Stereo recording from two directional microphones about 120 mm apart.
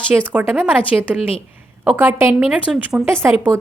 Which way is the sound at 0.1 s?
15° right (ahead or behind).